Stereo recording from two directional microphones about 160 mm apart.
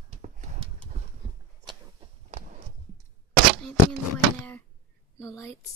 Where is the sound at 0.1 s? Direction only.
45° right (ahead or behind).